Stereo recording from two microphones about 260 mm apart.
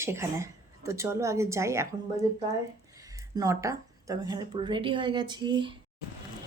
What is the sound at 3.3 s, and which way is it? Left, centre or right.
A woman's voice, centre.